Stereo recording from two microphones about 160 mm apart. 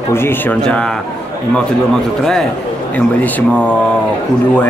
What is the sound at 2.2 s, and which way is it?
Speech, 5° left (ahead or behind).